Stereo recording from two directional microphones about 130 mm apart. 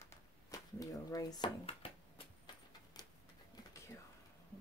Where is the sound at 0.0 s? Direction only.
25° left (ahead or behind).